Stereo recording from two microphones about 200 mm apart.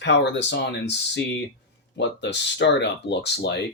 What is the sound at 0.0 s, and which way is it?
Speech, 60° left (ahead or behind).